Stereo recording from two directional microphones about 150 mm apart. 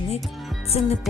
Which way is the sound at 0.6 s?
40° left (ahead or behind).